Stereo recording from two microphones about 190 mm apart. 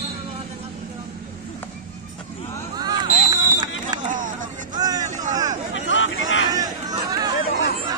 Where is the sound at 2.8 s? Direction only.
20° right (ahead or behind).